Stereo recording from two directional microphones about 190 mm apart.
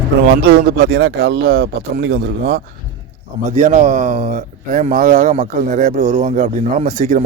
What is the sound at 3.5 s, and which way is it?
Speech, 35° right (ahead or behind).